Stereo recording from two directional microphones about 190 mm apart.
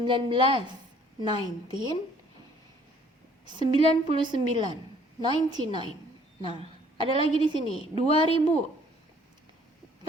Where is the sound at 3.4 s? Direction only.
25° right (ahead or behind).